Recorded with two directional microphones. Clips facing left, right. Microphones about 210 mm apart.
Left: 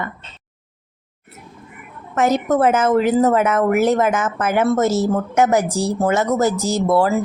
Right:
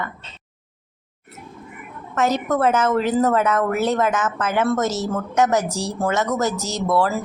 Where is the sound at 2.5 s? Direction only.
25° left (ahead or behind).